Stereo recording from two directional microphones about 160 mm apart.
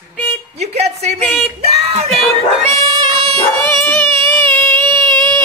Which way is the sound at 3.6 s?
15° left (ahead or behind).